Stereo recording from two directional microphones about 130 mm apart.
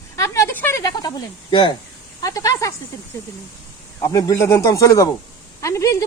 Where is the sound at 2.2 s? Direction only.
25° left (ahead or behind).